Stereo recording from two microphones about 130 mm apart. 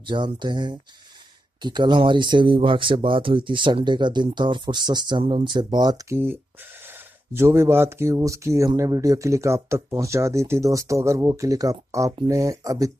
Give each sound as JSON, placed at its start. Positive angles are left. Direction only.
{"t": 0.0, "sound": "speech", "side_deg": -35}
{"t": 7.3, "sound": "speech", "side_deg": -20}